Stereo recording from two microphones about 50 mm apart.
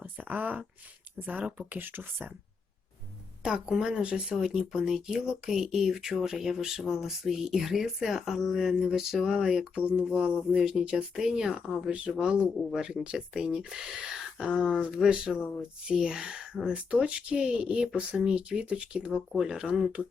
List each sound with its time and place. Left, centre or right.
0.0 s speech: right
1.8 s speech: right
3.4 s speech: centre
11.9 s speech: right; by 15.4 s centre
15.4 s speech: left
15.9 s speech: centre